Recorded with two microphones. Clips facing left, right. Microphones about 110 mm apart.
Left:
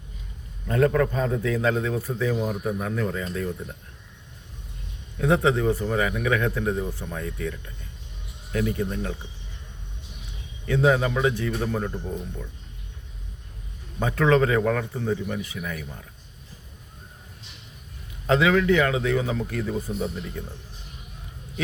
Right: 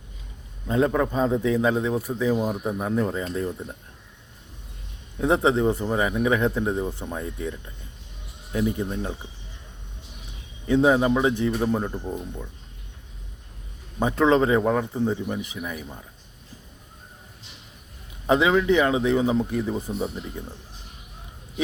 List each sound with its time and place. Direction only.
0.7 s a man's voice: 15° right (ahead or behind)
5.1 s a man's voice: 25° right (ahead or behind)
10.7 s a man's voice: 25° right (ahead or behind)
14.0 s a man's voice: 20° right (ahead or behind)
18.3 s a man's voice: 20° right (ahead or behind)